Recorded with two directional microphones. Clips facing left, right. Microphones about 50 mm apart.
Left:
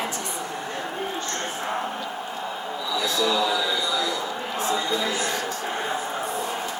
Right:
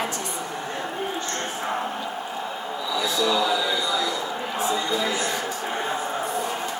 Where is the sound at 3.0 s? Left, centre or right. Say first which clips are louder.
Right 1 dB; centre.